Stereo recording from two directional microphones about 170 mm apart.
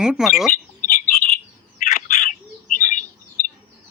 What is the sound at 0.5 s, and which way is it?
Bird, 55° left (ahead or behind).